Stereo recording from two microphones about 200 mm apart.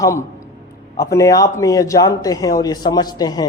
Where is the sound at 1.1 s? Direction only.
15° left (ahead or behind).